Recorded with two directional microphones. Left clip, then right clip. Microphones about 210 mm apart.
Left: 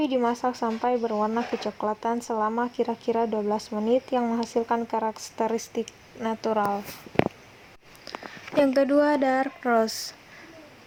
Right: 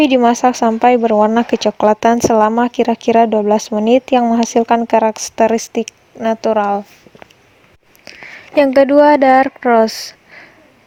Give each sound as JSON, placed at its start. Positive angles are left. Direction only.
{"t": 0.0, "sound": "speech", "side_deg": -45}
{"t": 8.1, "sound": "a sound", "side_deg": -30}
{"t": 8.5, "sound": "speech", "side_deg": -35}